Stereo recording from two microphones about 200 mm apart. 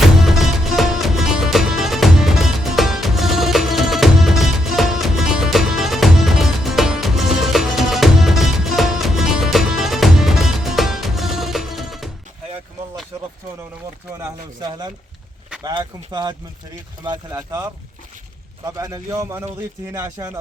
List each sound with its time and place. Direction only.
0.2 s music: centre (ahead or behind)
14.6 s a sound: 20° right (ahead or behind)
17.0 s a man's voice: 20° right (ahead or behind)